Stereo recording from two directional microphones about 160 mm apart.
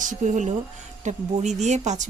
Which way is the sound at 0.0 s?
50° right (ahead or behind).